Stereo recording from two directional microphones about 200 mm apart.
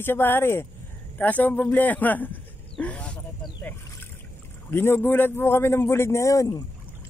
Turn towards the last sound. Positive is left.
turn(degrees=15)  # may be behind; listen again after turning